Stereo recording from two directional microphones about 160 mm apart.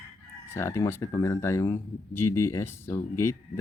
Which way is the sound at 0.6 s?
15° left (ahead or behind).